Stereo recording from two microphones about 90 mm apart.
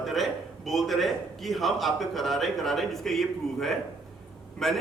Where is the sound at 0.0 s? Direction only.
Centre (ahead or behind).